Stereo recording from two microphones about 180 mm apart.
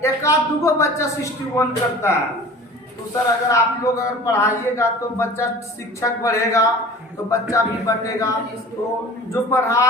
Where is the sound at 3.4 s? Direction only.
15° left (ahead or behind).